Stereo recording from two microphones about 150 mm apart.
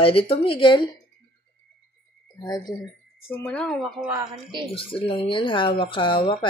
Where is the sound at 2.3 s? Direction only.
25° left (ahead or behind).